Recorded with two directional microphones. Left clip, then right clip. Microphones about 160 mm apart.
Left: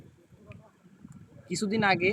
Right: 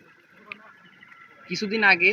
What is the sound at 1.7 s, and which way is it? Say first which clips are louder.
Speech: right 7 dB; 35° left (ahead or behind).